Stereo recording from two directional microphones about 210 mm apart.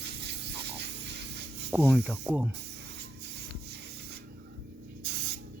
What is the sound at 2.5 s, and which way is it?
Music, 55° right (ahead or behind).